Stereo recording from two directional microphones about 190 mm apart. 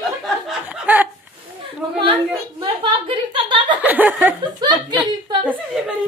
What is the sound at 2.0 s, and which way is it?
A woman's voice, 25° right (ahead or behind).